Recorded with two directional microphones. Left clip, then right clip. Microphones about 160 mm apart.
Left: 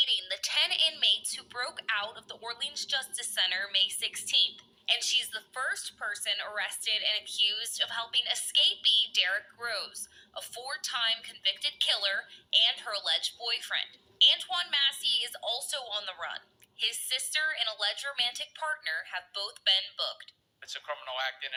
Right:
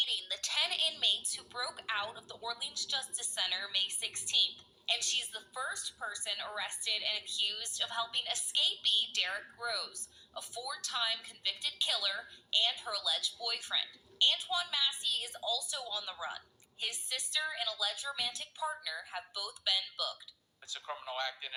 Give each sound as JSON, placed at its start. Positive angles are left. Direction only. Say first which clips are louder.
{"t": 0.0, "sound": "a woman's voice", "louder": "left 5 dB", "side_deg": 25}